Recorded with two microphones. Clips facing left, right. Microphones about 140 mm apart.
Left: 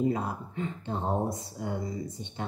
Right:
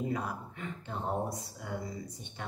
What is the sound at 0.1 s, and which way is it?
Speech, 25° left (ahead or behind).